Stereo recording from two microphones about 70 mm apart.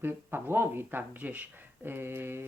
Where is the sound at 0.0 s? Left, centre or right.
Right.